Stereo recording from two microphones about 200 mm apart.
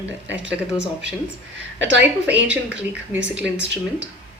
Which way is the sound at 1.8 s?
65° right (ahead or behind).